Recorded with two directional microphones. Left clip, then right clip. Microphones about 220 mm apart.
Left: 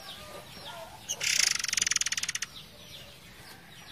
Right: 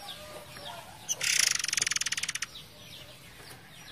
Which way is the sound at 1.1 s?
10° right (ahead or behind).